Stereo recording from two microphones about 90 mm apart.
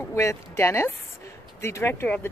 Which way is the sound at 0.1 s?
35° left (ahead or behind).